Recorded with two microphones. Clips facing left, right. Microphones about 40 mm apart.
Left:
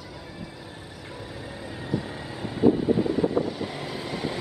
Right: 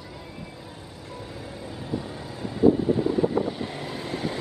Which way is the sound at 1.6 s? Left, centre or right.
Centre.